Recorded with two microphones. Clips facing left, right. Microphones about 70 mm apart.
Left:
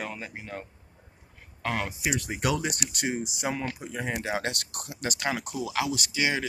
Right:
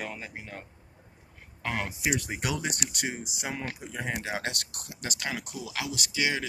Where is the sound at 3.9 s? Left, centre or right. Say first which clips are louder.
Left 2 dB; centre.